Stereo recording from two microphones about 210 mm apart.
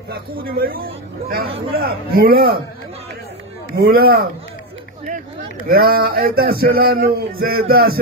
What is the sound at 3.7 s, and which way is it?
Speech, 45° right (ahead or behind).